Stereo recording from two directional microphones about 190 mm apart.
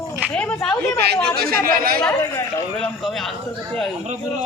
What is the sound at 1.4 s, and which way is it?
Speech, 50° right (ahead or behind).